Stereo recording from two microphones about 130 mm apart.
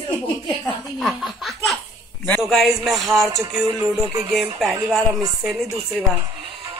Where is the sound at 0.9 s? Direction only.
Centre (ahead or behind).